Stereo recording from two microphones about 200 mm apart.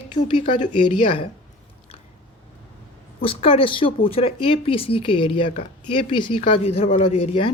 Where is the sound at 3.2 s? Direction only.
25° left (ahead or behind).